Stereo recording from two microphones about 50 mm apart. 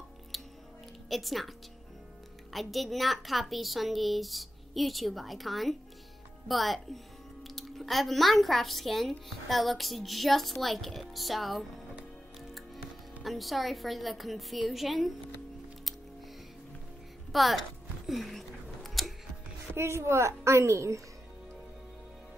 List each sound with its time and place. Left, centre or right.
0.3 s music: centre
1.0 s speech: centre
2.5 s a woman's voice: centre
17.3 s speech: centre
18.0 s a sound: centre
19.7 s a woman's voice: right